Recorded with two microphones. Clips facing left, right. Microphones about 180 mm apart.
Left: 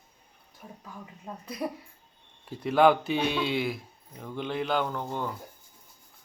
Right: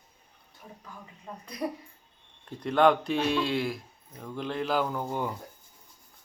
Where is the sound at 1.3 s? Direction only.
5° left (ahead or behind).